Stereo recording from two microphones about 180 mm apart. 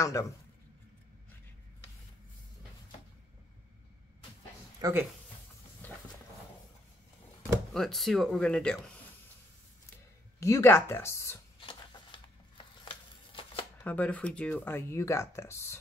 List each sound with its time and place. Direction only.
0.0 s speech: 20° left (ahead or behind)
4.8 s speech: 20° right (ahead or behind)
5.8 s a sound: 10° left (ahead or behind)
7.7 s speech: centre (ahead or behind)
10.4 s speech: 15° left (ahead or behind)
13.3 s shuffling cards: 30° left (ahead or behind)
13.8 s speech: 10° left (ahead or behind)